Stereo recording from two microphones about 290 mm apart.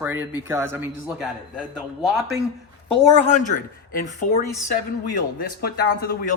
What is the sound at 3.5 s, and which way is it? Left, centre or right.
Speech, left.